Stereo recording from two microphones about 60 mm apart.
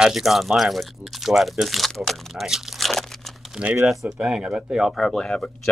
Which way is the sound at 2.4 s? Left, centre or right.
Centre.